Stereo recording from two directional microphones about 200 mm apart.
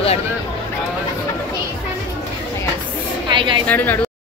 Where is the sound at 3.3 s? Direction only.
25° right (ahead or behind).